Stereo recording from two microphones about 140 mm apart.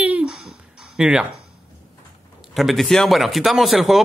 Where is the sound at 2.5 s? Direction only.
Centre (ahead or behind).